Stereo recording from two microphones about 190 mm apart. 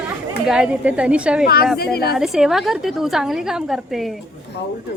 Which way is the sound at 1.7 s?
55° left (ahead or behind).